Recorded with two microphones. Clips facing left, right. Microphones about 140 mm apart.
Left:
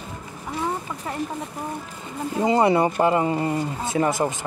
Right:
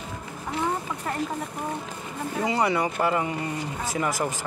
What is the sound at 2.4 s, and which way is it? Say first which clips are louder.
Speech: left 6 dB; 25° left (ahead or behind).